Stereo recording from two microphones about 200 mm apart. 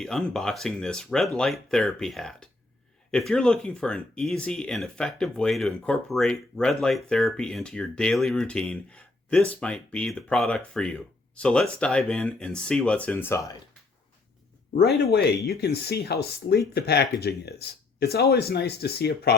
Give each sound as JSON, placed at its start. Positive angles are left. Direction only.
{"t": 0.0, "sound": "speech", "side_deg": 0}
{"t": 15.4, "sound": "speech", "side_deg": 55}